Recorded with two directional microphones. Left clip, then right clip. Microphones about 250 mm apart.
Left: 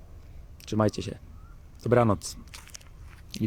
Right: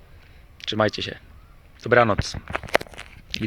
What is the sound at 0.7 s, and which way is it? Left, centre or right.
Speech, centre.